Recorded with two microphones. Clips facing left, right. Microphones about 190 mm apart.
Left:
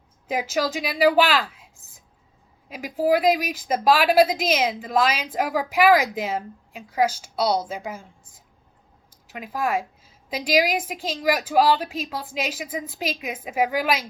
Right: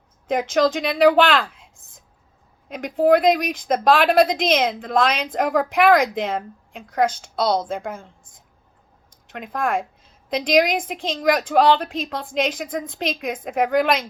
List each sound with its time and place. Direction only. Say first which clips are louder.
0.3 s speech: right 6 dB; 5° left (ahead or behind)